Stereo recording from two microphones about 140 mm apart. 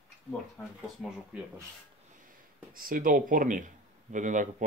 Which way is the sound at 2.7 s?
85° right.